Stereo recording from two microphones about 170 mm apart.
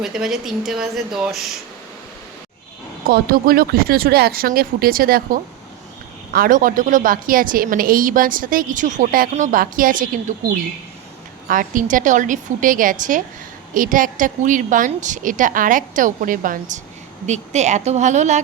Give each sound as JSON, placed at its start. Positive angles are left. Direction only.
{"t": 0.0, "sound": "speech", "side_deg": -5}
{"t": 3.1, "sound": "a woman's voice", "side_deg": -60}
{"t": 11.4, "sound": "a woman's voice", "side_deg": -50}